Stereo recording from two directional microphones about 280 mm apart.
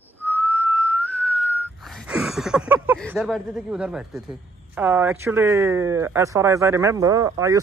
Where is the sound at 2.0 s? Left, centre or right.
Centre.